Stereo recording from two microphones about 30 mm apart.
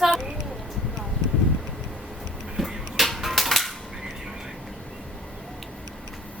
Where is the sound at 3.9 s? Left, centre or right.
Centre.